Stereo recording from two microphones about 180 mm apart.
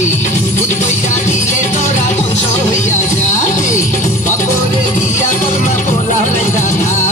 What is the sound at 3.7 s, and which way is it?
Music, 15° left (ahead or behind).